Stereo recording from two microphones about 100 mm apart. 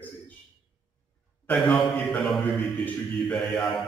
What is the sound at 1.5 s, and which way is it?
A man's voice, 5° left (ahead or behind).